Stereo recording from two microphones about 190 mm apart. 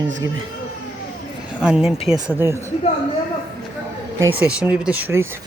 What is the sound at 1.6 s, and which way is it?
Speech, 5° right (ahead or behind).